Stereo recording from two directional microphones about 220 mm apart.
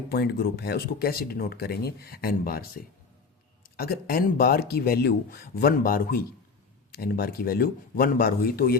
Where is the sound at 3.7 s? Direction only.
45° left (ahead or behind).